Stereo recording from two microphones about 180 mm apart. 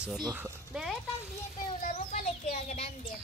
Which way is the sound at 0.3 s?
10° right (ahead or behind).